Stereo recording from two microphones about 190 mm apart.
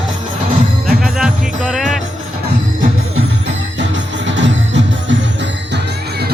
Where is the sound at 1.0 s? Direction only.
5° right (ahead or behind).